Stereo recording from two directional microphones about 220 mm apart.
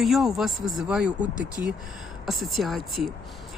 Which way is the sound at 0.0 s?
Centre (ahead or behind).